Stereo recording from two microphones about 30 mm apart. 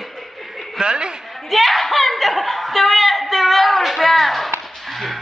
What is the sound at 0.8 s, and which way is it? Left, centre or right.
Speech, right.